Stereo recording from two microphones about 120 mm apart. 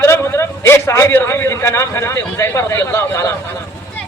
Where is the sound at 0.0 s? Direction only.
20° left (ahead or behind).